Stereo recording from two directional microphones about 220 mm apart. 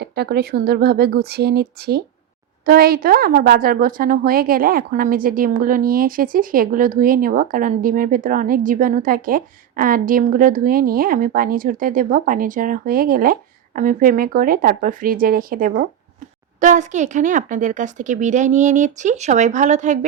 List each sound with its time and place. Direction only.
0.0 s a woman's voice: 45° right (ahead or behind)